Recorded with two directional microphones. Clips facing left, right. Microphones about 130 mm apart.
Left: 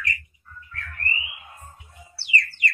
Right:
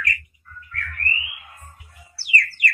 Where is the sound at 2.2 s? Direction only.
25° left (ahead or behind).